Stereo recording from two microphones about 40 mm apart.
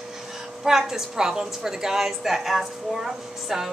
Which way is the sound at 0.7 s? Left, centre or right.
Centre.